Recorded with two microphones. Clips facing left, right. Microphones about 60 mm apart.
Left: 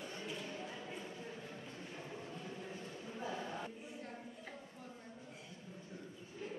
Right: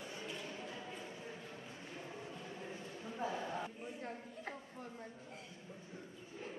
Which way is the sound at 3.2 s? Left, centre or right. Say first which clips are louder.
Right 3 dB; centre.